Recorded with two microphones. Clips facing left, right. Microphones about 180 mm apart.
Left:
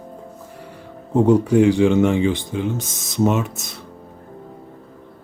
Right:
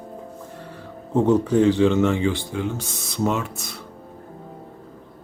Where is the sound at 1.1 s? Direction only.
10° left (ahead or behind).